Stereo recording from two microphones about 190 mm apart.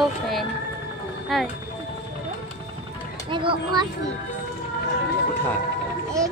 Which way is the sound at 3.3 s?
25° right (ahead or behind).